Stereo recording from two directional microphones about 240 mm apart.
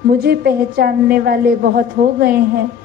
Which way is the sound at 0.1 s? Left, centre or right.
Right.